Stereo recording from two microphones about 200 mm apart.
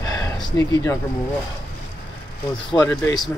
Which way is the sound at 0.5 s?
15° left (ahead or behind).